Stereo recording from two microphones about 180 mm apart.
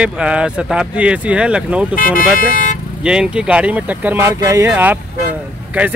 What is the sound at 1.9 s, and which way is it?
Speech, 50° left (ahead or behind).